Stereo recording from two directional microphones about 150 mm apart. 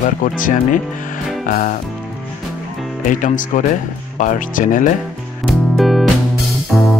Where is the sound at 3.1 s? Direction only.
60° left (ahead or behind).